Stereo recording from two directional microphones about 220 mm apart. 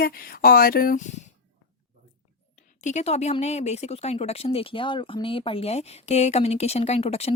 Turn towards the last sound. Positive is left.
turn(degrees=30)  # may be behind; listen again after turning